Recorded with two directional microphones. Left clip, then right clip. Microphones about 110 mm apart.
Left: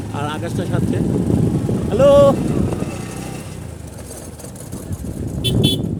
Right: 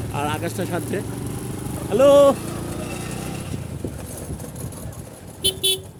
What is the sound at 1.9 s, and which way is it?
Speech, 5° left (ahead or behind).